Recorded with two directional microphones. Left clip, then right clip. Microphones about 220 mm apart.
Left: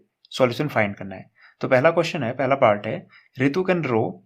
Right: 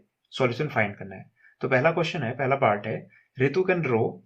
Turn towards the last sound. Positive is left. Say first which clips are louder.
# left 2 dB
turn(degrees=40)  # may be behind; listen again after turning